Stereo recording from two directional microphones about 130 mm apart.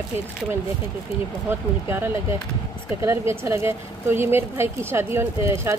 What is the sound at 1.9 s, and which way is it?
A woman's voice, 15° right (ahead or behind).